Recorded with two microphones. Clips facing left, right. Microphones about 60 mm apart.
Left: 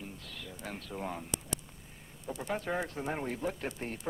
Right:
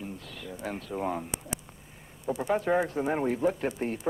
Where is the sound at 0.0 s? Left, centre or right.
Centre.